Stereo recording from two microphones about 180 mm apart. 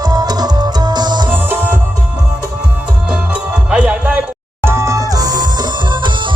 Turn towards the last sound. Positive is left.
turn(degrees=-25)  # may be behind; listen again after turning